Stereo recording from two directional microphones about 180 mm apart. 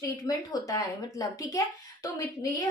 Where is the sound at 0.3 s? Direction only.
20° left (ahead or behind).